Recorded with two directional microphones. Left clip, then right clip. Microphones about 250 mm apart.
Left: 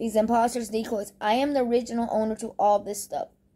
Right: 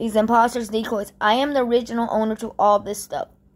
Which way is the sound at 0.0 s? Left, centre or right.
Centre.